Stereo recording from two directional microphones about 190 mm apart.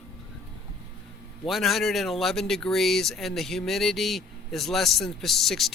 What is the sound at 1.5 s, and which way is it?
Speech, centre (ahead or behind).